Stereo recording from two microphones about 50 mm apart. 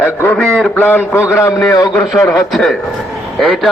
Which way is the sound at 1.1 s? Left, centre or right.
Left.